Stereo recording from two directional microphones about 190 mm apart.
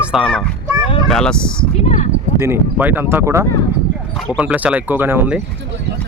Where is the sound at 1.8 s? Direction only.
40° left (ahead or behind).